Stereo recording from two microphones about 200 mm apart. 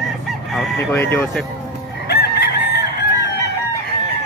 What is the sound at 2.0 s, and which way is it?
Fowl, 55° left (ahead or behind).